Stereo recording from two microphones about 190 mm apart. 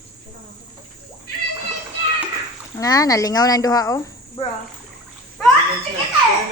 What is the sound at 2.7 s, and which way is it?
Speech, 20° left (ahead or behind).